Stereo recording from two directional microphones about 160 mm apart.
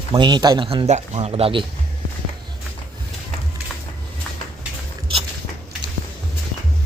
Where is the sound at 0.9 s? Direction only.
45° right (ahead or behind).